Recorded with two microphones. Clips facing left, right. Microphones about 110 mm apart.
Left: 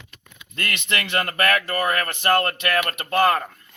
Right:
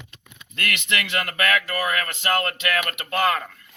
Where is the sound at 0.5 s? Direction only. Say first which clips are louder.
Even; 35° left (ahead or behind).